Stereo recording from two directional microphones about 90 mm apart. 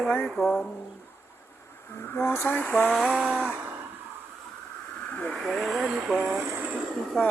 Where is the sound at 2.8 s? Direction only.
5° right (ahead or behind).